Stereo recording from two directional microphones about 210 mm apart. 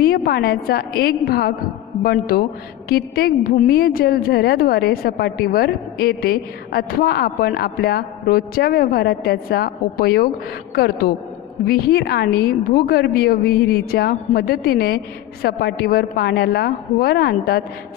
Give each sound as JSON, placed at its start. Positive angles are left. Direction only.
{"t": 0.0, "sound": "a woman's voice", "side_deg": 45}